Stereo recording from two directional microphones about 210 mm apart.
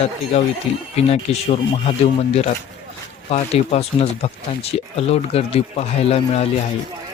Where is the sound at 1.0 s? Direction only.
30° left (ahead or behind).